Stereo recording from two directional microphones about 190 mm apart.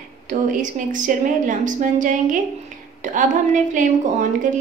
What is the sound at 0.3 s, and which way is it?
A woman's voice, 45° right (ahead or behind).